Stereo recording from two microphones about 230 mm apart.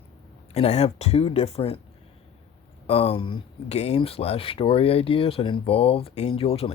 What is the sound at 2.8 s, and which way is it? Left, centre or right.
Speech, left.